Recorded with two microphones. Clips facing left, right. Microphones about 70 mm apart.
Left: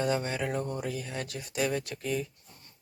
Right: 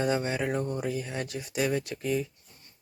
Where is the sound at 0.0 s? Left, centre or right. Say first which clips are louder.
Right 2 dB; centre.